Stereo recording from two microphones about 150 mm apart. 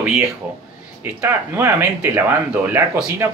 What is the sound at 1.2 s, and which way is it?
Speech, 15° right (ahead or behind).